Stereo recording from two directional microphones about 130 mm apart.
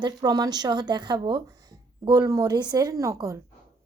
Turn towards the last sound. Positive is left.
turn(degrees=-25)  # may be behind; listen again after turning